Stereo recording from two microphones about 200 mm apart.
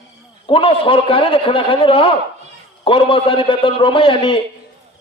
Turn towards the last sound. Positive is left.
turn(degrees=25)  # may be behind; listen again after turning